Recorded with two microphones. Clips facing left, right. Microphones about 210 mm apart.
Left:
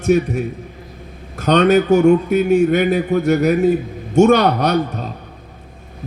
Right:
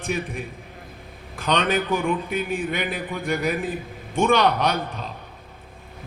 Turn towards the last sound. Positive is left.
turn(degrees=45)  # may be behind; listen again after turning